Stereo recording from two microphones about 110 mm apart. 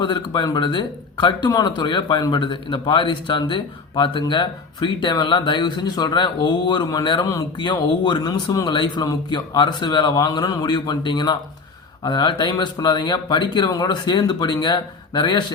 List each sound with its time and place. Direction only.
0.0 s speech: 45° left (ahead or behind)